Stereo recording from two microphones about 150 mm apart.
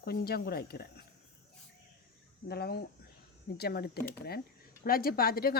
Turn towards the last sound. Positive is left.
turn(degrees=85)